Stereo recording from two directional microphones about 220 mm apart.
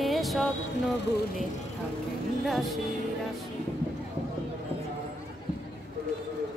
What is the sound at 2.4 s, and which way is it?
Music, centre (ahead or behind).